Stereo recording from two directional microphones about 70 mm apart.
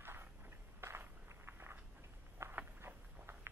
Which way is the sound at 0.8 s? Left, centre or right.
Right.